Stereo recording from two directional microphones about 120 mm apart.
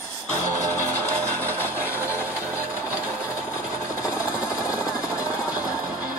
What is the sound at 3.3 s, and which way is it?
Jackhammer, 25° left (ahead or behind).